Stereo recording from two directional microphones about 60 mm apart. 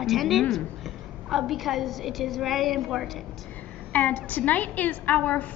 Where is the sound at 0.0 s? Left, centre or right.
Centre.